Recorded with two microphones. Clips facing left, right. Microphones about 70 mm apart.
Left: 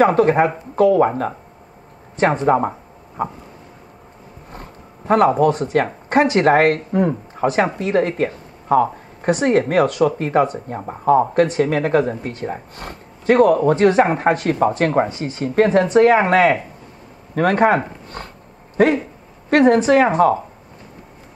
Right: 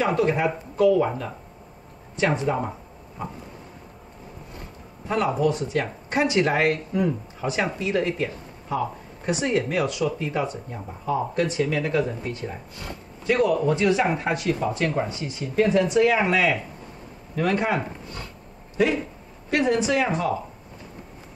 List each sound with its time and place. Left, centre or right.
0.0 s speech: left
4.5 s speech: left